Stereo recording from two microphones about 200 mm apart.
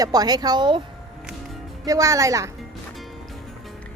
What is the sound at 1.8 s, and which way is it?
Speech, 15° right (ahead or behind).